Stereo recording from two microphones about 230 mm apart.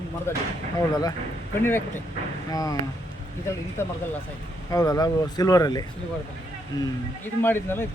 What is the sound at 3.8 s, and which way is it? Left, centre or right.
Speech, centre.